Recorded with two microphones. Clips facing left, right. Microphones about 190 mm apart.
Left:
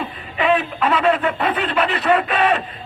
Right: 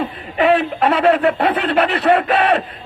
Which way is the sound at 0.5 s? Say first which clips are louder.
Right 3 dB; 70° right (ahead or behind).